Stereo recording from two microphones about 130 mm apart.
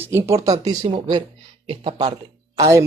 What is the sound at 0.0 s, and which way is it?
Speech, 20° right (ahead or behind).